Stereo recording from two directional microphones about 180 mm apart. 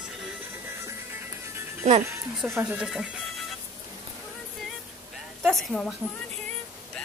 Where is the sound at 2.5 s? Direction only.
10° right (ahead or behind).